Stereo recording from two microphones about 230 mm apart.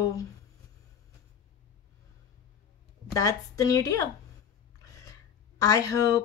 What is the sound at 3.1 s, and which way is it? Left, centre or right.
Speech, centre.